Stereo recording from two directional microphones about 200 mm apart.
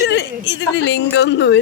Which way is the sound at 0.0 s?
60° left (ahead or behind).